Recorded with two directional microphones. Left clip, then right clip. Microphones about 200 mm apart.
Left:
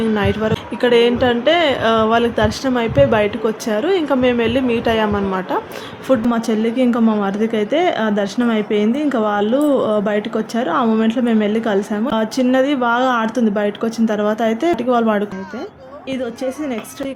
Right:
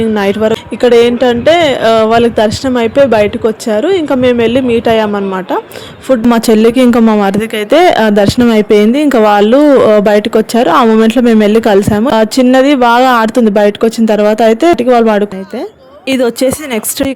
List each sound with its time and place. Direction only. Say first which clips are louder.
0.1 s speech: right 8 dB; 35° right (ahead or behind)
6.3 s speech: right 11 dB; 50° right (ahead or behind)
16.0 s a woman's voice: right 13 dB; 55° right (ahead or behind)